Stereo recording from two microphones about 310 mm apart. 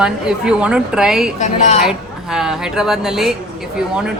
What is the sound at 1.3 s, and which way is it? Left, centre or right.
Speech, left.